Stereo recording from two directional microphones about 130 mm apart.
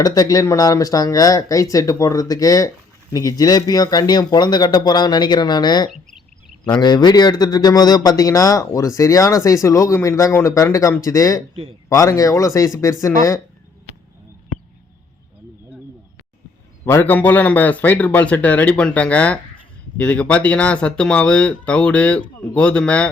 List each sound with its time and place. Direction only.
0.0 s a man's voice: 30° left (ahead or behind)
5.9 s a sound: centre (ahead or behind)
6.7 s a man's voice: 35° left (ahead or behind)
16.8 s speech: 15° left (ahead or behind)